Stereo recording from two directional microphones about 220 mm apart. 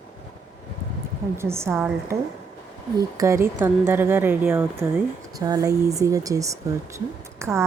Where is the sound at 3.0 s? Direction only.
15° right (ahead or behind).